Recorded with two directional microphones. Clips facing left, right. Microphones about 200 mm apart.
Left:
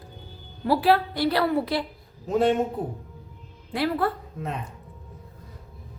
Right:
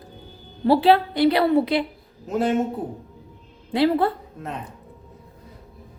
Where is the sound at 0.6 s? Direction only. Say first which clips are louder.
Right 4 dB; 25° right (ahead or behind).